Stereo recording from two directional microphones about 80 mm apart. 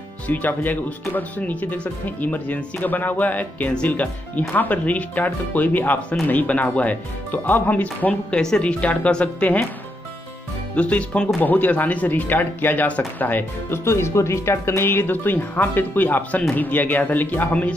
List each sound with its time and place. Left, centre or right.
0.3 s a woman's voice: left
10.8 s a woman's voice: centre